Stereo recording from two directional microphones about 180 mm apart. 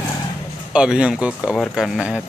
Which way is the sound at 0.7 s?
5° right (ahead or behind).